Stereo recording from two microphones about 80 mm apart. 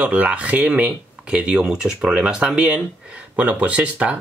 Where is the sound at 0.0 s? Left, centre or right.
Centre.